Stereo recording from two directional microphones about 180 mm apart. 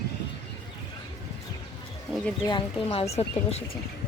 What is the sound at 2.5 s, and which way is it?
Speech, 30° left (ahead or behind).